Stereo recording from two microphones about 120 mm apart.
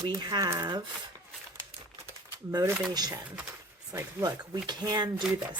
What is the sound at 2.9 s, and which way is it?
Speech, 35° right (ahead or behind).